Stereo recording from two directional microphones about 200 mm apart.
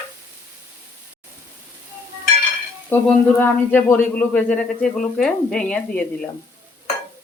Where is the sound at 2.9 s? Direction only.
10° left (ahead or behind).